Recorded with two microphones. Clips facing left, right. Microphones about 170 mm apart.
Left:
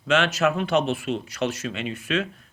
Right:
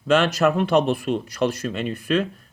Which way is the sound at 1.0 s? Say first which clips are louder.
Right 4 dB; 50° right (ahead or behind).